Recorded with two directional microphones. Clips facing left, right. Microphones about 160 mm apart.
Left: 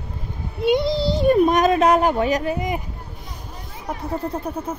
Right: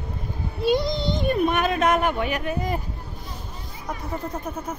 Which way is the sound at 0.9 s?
35° left (ahead or behind).